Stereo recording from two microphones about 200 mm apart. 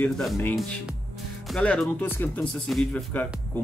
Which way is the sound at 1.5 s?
5° left (ahead or behind).